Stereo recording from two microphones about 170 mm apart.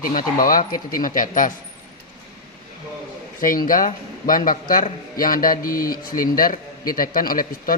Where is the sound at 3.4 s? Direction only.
55° left (ahead or behind).